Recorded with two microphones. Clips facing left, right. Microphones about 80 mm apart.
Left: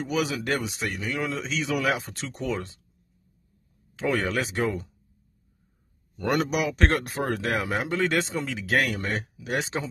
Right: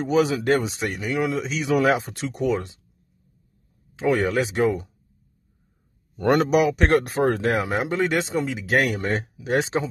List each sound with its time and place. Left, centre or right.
0.0 s speech: right
3.9 s speech: centre
6.1 s speech: right
8.1 s speech: centre